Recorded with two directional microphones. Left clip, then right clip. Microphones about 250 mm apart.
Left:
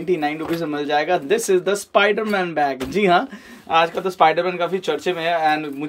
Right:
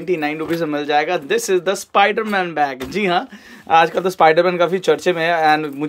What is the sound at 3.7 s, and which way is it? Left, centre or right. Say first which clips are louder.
Speech: right 4 dB; centre.